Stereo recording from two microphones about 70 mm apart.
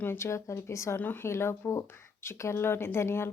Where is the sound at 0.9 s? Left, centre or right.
Left.